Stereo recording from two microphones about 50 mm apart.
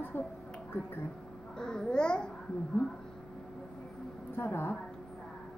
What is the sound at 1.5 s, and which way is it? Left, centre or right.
Speech, centre.